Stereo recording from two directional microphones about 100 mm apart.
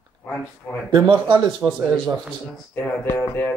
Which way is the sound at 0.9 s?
50° right (ahead or behind).